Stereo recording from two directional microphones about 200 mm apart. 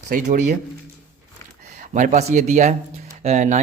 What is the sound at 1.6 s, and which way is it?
Speech, 35° right (ahead or behind).